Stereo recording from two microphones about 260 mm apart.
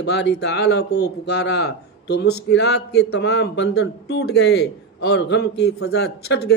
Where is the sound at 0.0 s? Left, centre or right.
Left.